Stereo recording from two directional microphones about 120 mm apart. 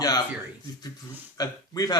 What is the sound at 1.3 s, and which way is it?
Speech, 35° left (ahead or behind).